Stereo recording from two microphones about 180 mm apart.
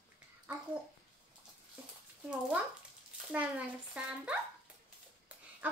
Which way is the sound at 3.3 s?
5° right (ahead or behind).